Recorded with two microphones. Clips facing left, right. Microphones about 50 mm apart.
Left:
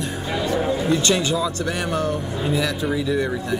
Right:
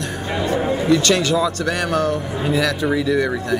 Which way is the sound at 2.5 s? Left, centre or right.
Right.